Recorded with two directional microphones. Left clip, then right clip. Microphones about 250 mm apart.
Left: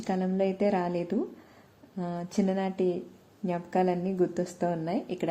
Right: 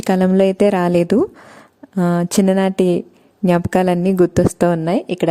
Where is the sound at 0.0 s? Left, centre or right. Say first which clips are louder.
Right 14 dB; right.